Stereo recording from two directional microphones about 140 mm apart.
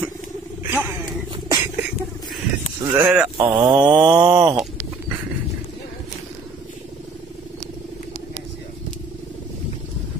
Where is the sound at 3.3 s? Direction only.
35° right (ahead or behind).